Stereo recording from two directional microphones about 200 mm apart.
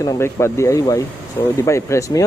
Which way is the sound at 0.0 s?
15° left (ahead or behind).